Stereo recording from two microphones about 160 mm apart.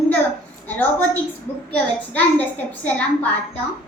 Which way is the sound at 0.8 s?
15° left (ahead or behind).